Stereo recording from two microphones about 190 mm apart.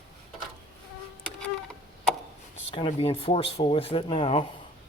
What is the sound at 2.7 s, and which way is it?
Speech, 30° left (ahead or behind).